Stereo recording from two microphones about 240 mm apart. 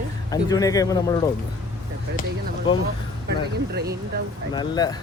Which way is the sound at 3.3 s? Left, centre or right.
Right.